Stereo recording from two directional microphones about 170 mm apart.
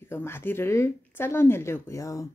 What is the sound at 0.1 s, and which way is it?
Speech, 15° left (ahead or behind).